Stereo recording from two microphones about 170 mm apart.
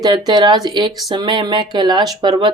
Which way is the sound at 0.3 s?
25° right (ahead or behind).